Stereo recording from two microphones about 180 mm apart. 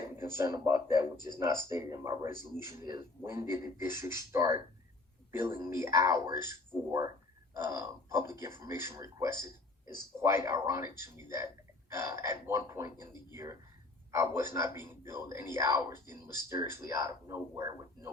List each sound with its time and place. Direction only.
0.1 s speech: 15° right (ahead or behind)
7.5 s speech: 15° right (ahead or behind)